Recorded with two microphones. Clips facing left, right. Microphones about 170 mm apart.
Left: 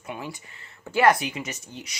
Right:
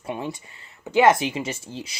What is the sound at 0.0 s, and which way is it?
Speech, 25° right (ahead or behind).